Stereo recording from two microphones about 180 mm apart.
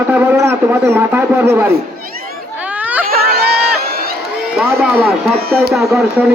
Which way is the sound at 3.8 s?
60° right (ahead or behind).